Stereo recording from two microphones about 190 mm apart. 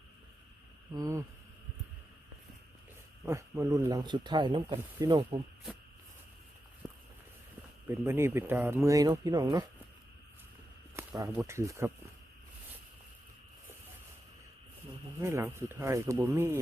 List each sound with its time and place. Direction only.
0.9 s speech: 20° right (ahead or behind)
3.2 s speech: 15° right (ahead or behind)
7.9 s speech: 10° right (ahead or behind)
10.9 s a sound: 20° right (ahead or behind)
11.3 s speech: 15° right (ahead or behind)
15.2 s speech: 15° right (ahead or behind)